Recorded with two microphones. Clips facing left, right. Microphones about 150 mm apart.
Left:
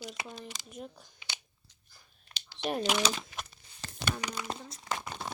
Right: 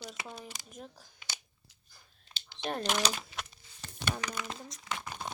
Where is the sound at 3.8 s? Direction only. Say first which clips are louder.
Left 3 dB; 90° left.